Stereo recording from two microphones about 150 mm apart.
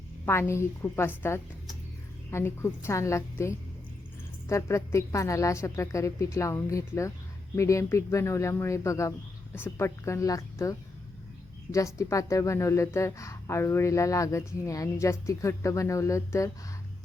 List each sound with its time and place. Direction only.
0.3 s a woman's voice: 15° left (ahead or behind)
11.9 s a woman's voice: 20° left (ahead or behind)